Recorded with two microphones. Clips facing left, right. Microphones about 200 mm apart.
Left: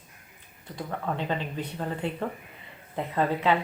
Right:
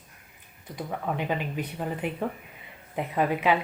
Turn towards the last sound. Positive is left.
turn(degrees=-15)  # may be behind; listen again after turning